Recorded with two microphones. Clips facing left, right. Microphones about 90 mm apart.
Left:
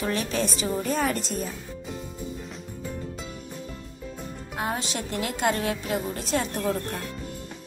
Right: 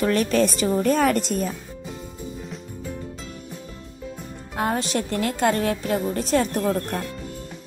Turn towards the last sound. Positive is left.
turn(degrees=-45)  # may be behind; listen again after turning